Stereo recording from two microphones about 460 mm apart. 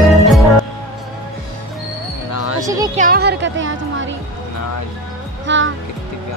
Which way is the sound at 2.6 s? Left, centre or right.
Centre.